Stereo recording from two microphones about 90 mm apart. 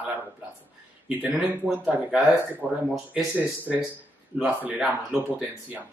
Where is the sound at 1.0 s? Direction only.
10° right (ahead or behind).